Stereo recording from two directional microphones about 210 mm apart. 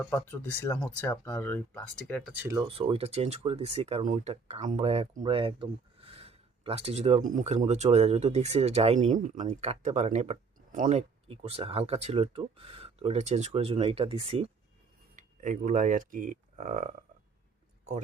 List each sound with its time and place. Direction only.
0.0 s speech: 10° left (ahead or behind)
2.3 s speech: 10° right (ahead or behind)
2.6 s speech: 25° right (ahead or behind)